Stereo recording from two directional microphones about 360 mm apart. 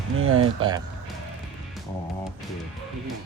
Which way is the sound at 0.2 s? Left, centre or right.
Right.